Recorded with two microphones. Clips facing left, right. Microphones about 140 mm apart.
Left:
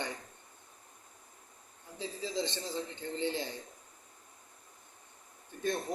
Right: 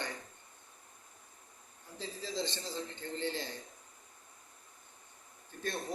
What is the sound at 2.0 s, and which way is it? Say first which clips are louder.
Speech: left 3 dB; 20° left (ahead or behind).